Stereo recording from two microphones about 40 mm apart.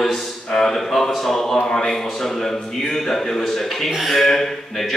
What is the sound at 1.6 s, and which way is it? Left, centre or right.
Speech, left.